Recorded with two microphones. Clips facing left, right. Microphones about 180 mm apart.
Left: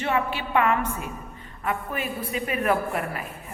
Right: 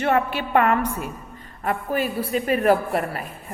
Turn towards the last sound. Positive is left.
turn(degrees=-35)  # may be behind; listen again after turning